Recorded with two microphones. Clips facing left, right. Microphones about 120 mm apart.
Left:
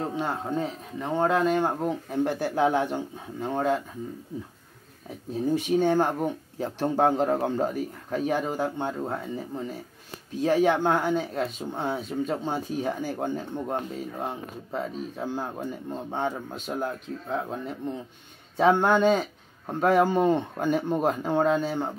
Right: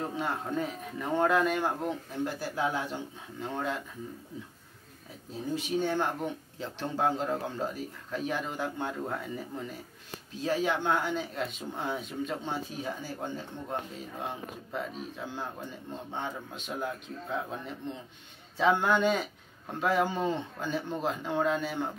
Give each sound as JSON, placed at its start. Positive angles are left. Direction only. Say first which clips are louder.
{"t": 0.0, "sound": "speech", "louder": "left 4 dB", "side_deg": 30}
{"t": 2.2, "sound": "speech", "louder": "left 7 dB", "side_deg": 60}
{"t": 3.3, "sound": "speech", "louder": "left 7 dB", "side_deg": 40}
{"t": 5.5, "sound": "speech", "louder": "left 7 dB", "side_deg": 50}
{"t": 10.4, "sound": "speech", "louder": "left 7 dB", "side_deg": 55}
{"t": 14.2, "sound": "speech", "louder": "left 4 dB", "side_deg": 35}